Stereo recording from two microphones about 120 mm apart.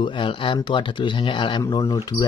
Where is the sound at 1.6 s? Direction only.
30° left (ahead or behind).